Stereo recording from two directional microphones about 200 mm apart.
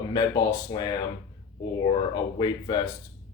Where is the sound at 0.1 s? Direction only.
20° left (ahead or behind).